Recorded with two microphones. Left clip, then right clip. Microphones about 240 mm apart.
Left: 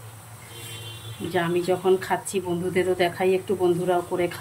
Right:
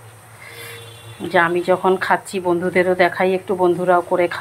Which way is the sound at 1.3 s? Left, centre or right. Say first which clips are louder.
Right 8 dB; right.